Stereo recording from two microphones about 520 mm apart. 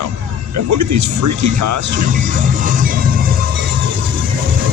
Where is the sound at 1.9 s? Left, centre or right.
Centre.